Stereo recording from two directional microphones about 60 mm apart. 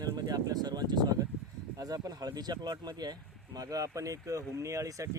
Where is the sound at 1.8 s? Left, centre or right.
Right.